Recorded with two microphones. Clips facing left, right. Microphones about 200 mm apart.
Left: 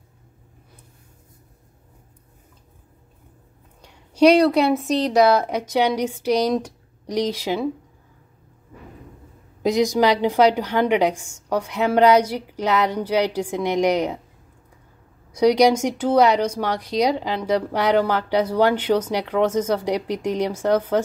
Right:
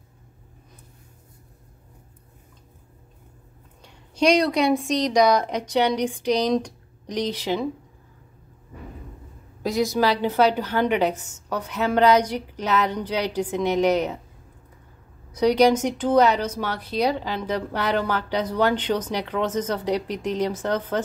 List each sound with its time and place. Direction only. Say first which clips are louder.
3.8 s speech: left 6 dB; 10° left (ahead or behind)
9.6 s speech: left 4 dB; 15° left (ahead or behind)
15.3 s speech: left 2 dB; 10° left (ahead or behind)